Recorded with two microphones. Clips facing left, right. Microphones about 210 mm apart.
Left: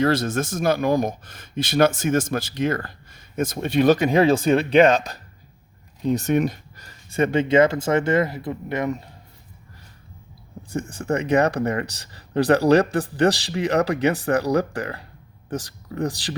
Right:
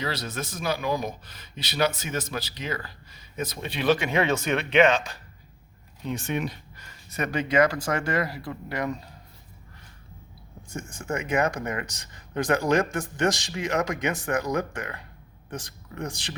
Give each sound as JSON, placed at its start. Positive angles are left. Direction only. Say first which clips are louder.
{"t": 0.0, "sound": "speech", "louder": "left 11 dB", "side_deg": 50}
{"t": 10.7, "sound": "speech", "louder": "left 7 dB", "side_deg": 35}